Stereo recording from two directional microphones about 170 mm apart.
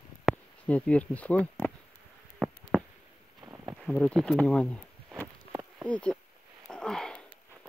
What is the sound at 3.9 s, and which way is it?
Speech, 5° left (ahead or behind).